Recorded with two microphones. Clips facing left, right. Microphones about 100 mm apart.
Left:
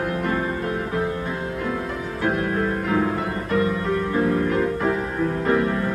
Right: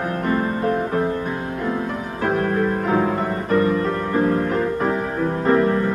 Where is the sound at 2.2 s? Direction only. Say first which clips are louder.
Right 3 dB; 35° right (ahead or behind).